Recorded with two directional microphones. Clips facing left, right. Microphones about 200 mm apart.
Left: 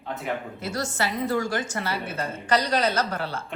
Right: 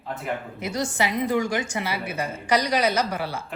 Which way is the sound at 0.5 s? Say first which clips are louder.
Right 2 dB; 15° right (ahead or behind).